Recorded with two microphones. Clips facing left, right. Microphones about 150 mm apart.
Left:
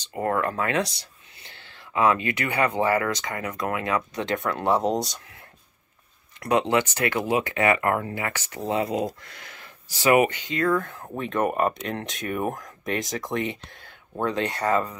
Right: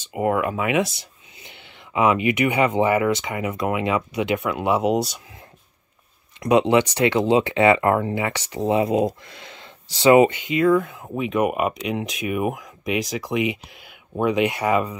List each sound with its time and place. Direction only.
0.1 s speech: 15° right (ahead or behind)
6.7 s speech: 20° right (ahead or behind)